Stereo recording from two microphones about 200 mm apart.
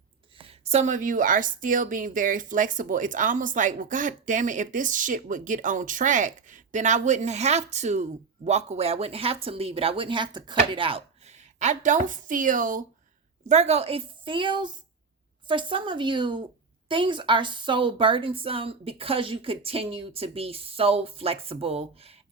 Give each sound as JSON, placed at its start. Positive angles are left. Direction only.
{"t": 0.3, "sound": "a woman's voice", "side_deg": -30}